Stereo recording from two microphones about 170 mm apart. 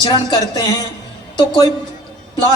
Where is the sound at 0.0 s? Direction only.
25° left (ahead or behind).